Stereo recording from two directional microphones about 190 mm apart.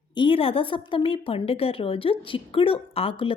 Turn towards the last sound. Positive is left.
turn(degrees=30)  # may be behind; listen again after turning